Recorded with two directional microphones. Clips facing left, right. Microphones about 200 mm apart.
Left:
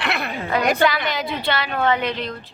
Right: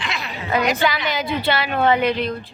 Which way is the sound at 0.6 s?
55° left (ahead or behind).